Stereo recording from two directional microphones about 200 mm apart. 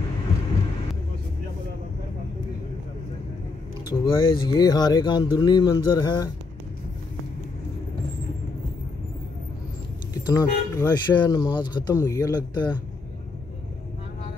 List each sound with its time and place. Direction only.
4.0 s speech: 20° left (ahead or behind)
10.1 s speech: 20° left (ahead or behind)